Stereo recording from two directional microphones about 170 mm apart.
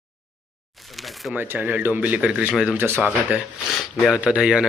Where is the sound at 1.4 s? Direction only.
10° right (ahead or behind).